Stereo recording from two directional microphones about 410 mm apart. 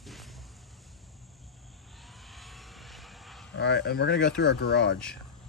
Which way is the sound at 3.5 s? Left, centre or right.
Left.